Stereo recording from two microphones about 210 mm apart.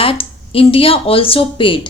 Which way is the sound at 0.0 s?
25° left (ahead or behind).